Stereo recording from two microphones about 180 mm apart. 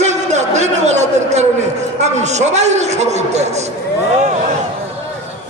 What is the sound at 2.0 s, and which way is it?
A man's voice, 40° right (ahead or behind).